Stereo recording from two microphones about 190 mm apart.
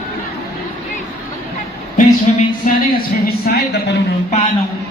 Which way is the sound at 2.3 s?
40° left (ahead or behind).